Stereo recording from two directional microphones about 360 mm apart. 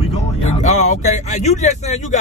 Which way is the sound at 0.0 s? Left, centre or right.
Centre.